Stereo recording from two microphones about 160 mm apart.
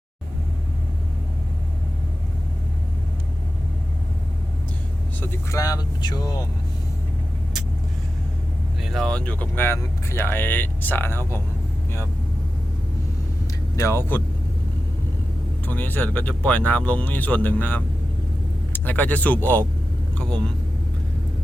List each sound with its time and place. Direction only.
5.2 s speech: 15° left (ahead or behind)
8.8 s speech: centre (ahead or behind)
13.7 s speech: 15° left (ahead or behind)
15.6 s speech: 10° left (ahead or behind)